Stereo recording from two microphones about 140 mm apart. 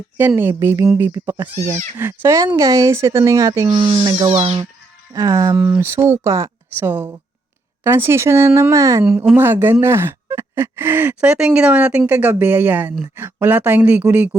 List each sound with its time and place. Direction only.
0.2 s speech: 15° right (ahead or behind)
4.1 s speech: 50° right (ahead or behind)
5.1 s speech: 25° right (ahead or behind)